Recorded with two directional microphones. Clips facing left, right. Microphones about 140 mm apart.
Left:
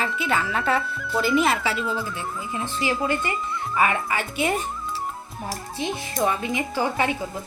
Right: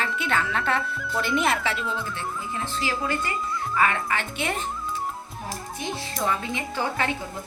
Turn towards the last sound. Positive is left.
turn(degrees=15)  # may be behind; listen again after turning